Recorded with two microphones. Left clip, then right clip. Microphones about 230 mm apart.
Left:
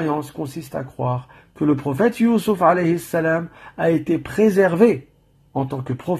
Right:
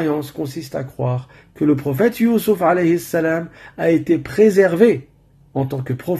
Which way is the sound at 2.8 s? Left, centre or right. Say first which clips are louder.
Right 2 dB; centre.